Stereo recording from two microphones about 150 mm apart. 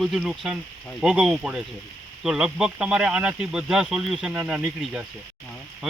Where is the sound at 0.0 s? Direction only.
5° right (ahead or behind).